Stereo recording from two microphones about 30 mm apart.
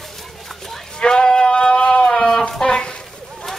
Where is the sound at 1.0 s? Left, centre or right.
Left.